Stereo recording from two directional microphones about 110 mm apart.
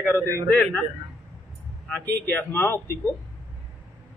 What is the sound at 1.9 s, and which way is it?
A man's voice, 15° left (ahead or behind).